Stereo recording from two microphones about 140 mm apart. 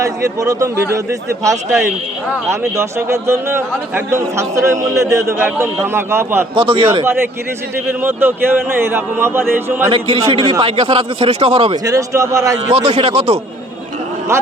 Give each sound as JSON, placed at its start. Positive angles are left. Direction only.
{"t": 0.0, "sound": "a man's voice", "side_deg": -20}
{"t": 6.6, "sound": "a man's voice", "side_deg": -40}
{"t": 8.0, "sound": "a man's voice", "side_deg": -15}
{"t": 9.9, "sound": "a man's voice", "side_deg": -40}
{"t": 11.7, "sound": "a man's voice", "side_deg": -25}
{"t": 12.7, "sound": "speech", "side_deg": -45}